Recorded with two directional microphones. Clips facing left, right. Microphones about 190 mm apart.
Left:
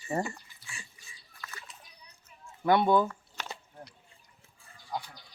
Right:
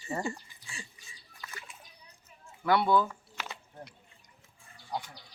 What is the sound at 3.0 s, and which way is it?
Squish, 10° right (ahead or behind).